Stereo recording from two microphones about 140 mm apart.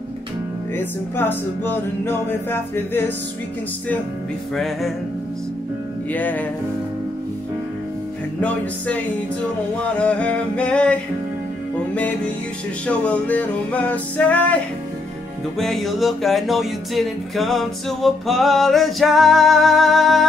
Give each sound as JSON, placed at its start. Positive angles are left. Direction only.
{"t": 0.7, "sound": "speech", "side_deg": 15}
{"t": 4.6, "sound": "music", "side_deg": 0}
{"t": 6.1, "sound": "speech", "side_deg": 10}
{"t": 8.4, "sound": "speech", "side_deg": 10}
{"t": 15.6, "sound": "music", "side_deg": 0}